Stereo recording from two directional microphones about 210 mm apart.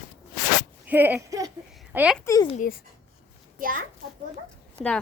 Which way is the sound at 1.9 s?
5° right (ahead or behind).